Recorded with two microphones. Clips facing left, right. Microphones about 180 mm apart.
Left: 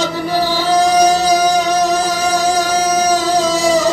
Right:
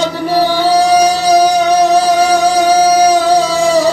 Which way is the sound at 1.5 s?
60° right (ahead or behind).